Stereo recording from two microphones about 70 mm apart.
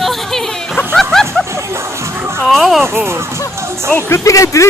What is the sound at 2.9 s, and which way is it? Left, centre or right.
Speech, right.